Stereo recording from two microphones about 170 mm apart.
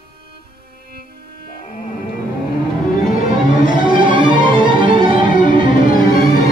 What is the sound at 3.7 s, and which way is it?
Music, 25° right (ahead or behind).